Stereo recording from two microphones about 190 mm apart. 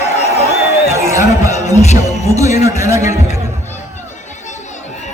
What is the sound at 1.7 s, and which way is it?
Music, 35° left (ahead or behind).